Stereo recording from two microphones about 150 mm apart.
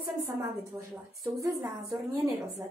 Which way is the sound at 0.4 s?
20° right (ahead or behind).